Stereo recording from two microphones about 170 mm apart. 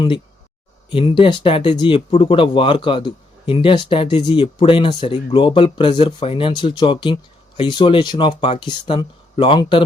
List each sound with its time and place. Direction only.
0.9 s speech: 30° left (ahead or behind)